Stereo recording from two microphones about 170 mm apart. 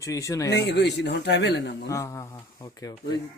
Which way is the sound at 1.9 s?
15° left (ahead or behind).